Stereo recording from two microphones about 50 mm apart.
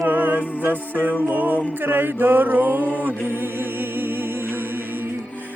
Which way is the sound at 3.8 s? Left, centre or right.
Right.